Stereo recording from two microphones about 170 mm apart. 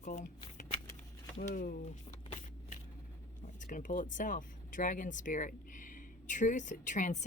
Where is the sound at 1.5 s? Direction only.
55° left (ahead or behind).